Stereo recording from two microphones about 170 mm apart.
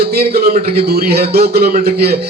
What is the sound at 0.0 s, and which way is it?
A man's voice, 65° right (ahead or behind).